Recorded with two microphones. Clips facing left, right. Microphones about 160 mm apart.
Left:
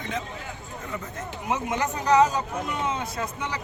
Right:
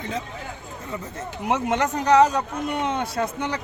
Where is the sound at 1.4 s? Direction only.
70° right (ahead or behind).